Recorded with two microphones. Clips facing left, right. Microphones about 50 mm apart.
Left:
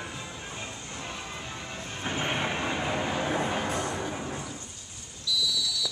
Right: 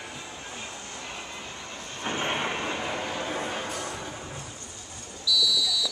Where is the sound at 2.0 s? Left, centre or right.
Centre.